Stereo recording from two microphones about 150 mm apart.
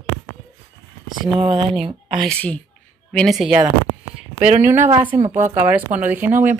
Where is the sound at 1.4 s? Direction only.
35° right (ahead or behind).